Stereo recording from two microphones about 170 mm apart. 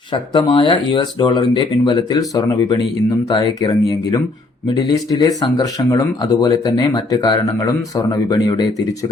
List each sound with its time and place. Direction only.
0.1 s speech: 25° left (ahead or behind)